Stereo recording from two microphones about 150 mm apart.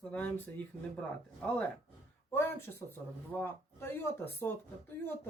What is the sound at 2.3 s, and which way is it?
Speech, 15° left (ahead or behind).